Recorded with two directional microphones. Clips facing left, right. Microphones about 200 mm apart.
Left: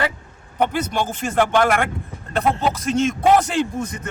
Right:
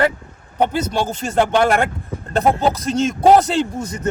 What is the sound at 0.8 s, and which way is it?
A man's voice, 35° right (ahead or behind).